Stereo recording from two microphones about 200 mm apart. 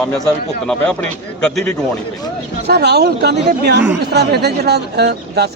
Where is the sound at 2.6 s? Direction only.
55° right (ahead or behind).